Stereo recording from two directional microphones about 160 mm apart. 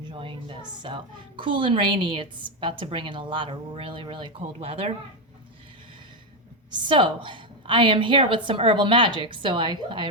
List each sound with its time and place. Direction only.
0.1 s a woman's voice: 30° right (ahead or behind)
6.7 s a woman's voice: 30° right (ahead or behind)